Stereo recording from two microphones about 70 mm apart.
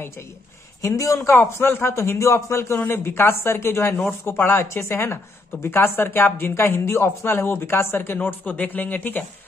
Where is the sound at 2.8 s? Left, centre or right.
Left.